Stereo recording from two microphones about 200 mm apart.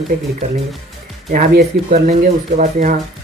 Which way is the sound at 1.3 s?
45° right (ahead or behind).